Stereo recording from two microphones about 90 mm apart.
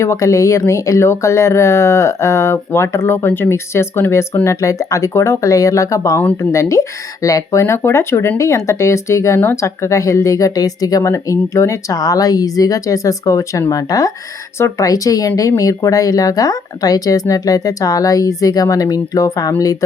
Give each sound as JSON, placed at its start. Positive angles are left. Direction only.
{"t": 0.0, "sound": "speech", "side_deg": 35}